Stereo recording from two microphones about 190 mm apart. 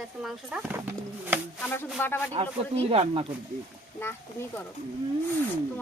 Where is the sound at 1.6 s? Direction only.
10° left (ahead or behind).